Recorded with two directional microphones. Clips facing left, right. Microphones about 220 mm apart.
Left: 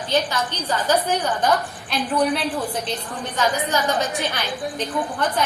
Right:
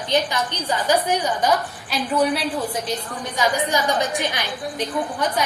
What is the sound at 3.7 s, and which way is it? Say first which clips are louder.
A woman's voice: right 1 dB; 15° right (ahead or behind).